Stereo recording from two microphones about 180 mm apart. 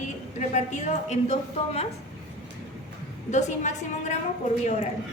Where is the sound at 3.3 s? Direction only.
40° left (ahead or behind).